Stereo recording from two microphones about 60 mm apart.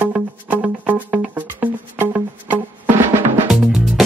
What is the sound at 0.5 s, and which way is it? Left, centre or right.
Music, right.